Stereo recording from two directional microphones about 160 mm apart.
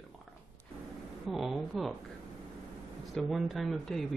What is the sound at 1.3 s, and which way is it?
Speech, centre (ahead or behind).